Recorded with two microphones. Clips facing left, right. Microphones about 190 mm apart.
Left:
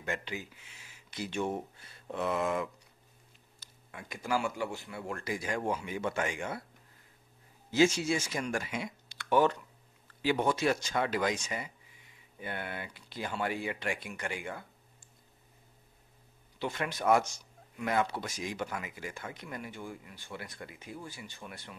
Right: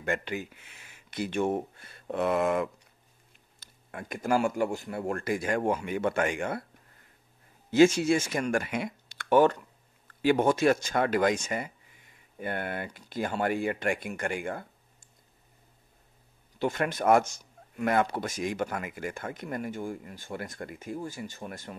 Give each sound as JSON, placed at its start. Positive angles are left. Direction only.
{"t": 0.0, "sound": "speech", "side_deg": -55}
{"t": 7.7, "sound": "speech", "side_deg": -55}
{"t": 16.5, "sound": "speech", "side_deg": -50}